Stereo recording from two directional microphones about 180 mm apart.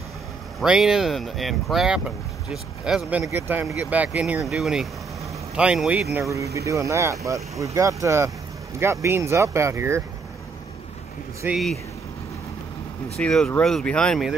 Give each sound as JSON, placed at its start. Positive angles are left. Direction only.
{"t": 0.6, "sound": "speech", "side_deg": 0}
{"t": 6.1, "sound": "speech", "side_deg": -15}
{"t": 11.4, "sound": "speech", "side_deg": 0}
{"t": 13.2, "sound": "speech", "side_deg": 5}